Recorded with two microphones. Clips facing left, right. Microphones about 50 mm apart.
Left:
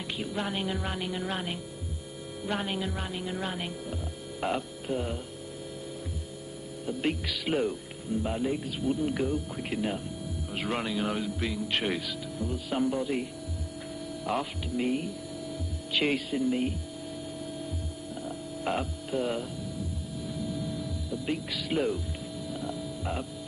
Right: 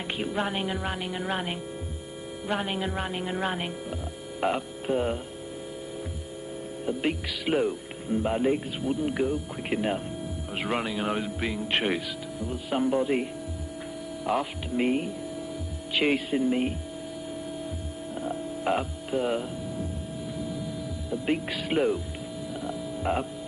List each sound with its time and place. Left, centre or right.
0.2 s speech: right
2.8 s speech: right
4.4 s hum: centre
4.8 s speech: right
7.1 s speech: centre
8.1 s speech: right
8.8 s speech: centre
14.2 s speech: centre
14.8 s speech: right
15.9 s speech: centre
18.6 s mains hum: centre
21.1 s speech: right
22.5 s music: centre